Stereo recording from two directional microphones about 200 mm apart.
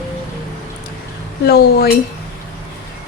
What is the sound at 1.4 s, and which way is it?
Speech, 50° left (ahead or behind).